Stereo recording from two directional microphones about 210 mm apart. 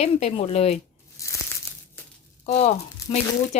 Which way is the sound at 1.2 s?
15° left (ahead or behind).